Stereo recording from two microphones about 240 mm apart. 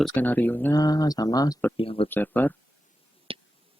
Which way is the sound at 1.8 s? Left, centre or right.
Left.